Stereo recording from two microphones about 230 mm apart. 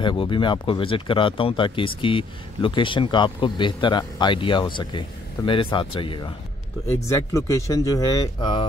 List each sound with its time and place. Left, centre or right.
0.0 s speech: left